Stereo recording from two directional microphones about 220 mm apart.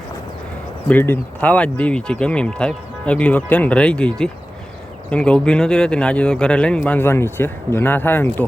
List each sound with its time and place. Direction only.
0.9 s speech: 10° left (ahead or behind)